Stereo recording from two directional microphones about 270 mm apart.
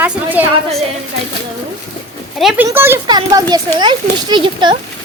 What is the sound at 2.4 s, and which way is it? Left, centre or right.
Speech, centre.